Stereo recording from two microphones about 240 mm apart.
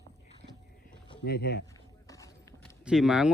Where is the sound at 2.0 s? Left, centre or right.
Centre.